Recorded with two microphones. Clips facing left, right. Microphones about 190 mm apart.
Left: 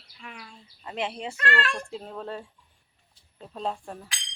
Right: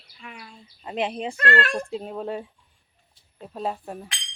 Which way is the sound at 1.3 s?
45° right (ahead or behind).